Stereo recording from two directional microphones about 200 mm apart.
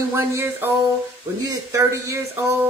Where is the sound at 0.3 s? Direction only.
10° right (ahead or behind).